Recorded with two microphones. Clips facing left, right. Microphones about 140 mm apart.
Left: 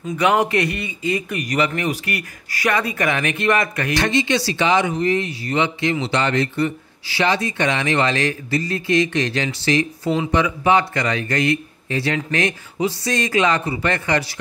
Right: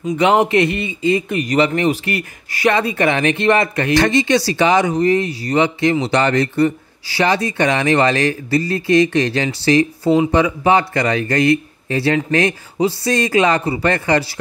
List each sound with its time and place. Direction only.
0.2 s a man's voice: 25° right (ahead or behind)
3.9 s speech: 45° right (ahead or behind)